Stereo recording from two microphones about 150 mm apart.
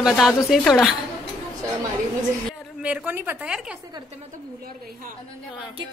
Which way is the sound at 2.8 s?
10° right (ahead or behind).